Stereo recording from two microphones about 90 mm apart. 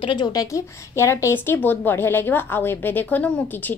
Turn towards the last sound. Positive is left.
turn(degrees=15)  # may be behind; listen again after turning